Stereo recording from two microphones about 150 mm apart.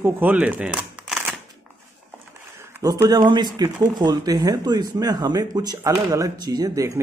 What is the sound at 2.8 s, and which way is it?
Speech, 25° right (ahead or behind).